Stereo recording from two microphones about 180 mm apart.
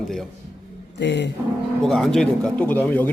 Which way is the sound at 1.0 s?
75° left (ahead or behind).